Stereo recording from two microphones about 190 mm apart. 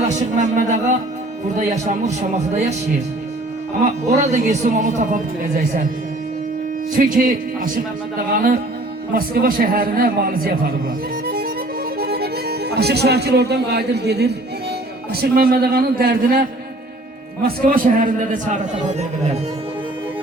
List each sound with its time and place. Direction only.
0.1 s speech: 40° right (ahead or behind)
3.8 s speech: 40° right (ahead or behind)
6.9 s a man's voice: 45° right (ahead or behind)
11.9 s a man's voice: 55° right (ahead or behind); by 19.4 s 35° right (ahead or behind)